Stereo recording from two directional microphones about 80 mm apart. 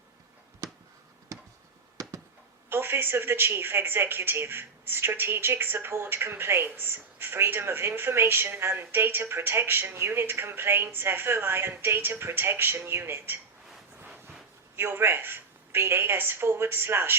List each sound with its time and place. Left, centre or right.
1.3 s a sound: right
2.6 s speech: right
14.8 s speech: right